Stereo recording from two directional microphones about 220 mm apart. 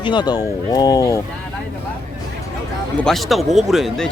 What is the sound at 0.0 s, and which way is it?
Speech, 20° left (ahead or behind).